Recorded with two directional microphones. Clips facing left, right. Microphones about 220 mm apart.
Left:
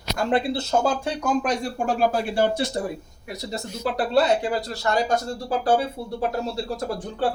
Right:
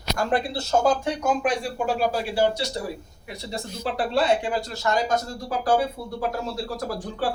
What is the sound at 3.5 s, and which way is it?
Speech, 40° left (ahead or behind).